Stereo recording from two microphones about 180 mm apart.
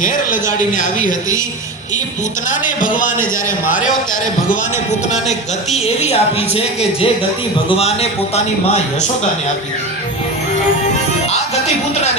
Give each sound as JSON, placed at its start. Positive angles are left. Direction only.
{"t": 0.8, "sound": "speech", "side_deg": 45}
{"t": 2.5, "sound": "speech", "side_deg": 45}
{"t": 5.7, "sound": "speech", "side_deg": 35}